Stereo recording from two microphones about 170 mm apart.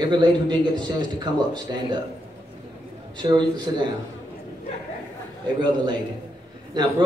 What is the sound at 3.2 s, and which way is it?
Speech, 25° right (ahead or behind).